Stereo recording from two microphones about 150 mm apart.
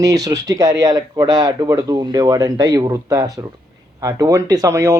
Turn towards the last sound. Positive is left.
turn(degrees=-20)  # may be behind; listen again after turning